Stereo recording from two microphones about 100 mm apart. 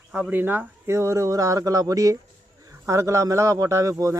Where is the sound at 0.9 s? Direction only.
30° right (ahead or behind).